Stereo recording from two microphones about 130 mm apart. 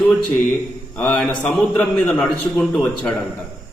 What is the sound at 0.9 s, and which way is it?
A man's voice, 10° left (ahead or behind).